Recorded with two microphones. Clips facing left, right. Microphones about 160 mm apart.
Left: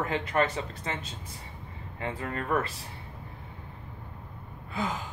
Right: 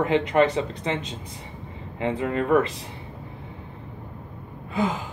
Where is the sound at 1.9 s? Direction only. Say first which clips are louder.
Right 9 dB; 20° right (ahead or behind).